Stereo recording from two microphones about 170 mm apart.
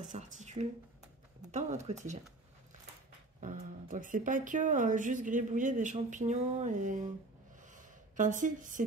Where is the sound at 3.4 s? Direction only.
50° right (ahead or behind).